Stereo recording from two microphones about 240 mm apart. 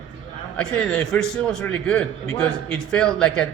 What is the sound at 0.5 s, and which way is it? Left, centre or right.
A man's voice, centre.